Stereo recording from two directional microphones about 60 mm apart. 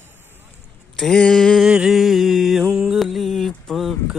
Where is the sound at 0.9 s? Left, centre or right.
Centre.